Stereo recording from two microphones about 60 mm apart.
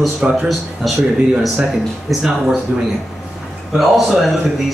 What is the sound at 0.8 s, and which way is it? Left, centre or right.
Speech, centre.